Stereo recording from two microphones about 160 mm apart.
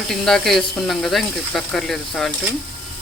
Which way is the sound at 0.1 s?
Centre (ahead or behind).